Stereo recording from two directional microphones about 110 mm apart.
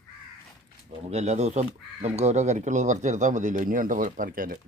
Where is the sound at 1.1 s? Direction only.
85° right.